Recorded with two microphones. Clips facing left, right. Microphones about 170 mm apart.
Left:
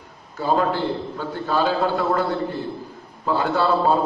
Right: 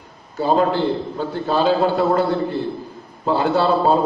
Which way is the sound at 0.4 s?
25° right (ahead or behind).